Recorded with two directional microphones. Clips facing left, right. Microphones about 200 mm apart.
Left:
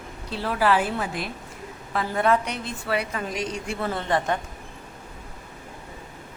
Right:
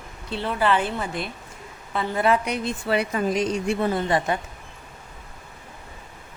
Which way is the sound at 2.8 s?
25° right (ahead or behind).